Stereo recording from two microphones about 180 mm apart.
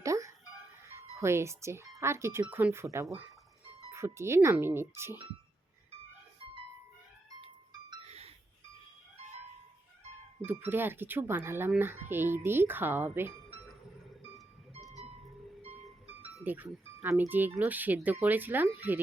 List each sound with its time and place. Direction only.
0.0 s music: 15° right (ahead or behind)
0.9 s speech: 15° right (ahead or behind)
8.0 s a sound: 35° right (ahead or behind)
10.7 s speech: 10° right (ahead or behind)
14.8 s music: centre (ahead or behind)
15.6 s music: 35° right (ahead or behind)
16.3 s speech: 10° right (ahead or behind)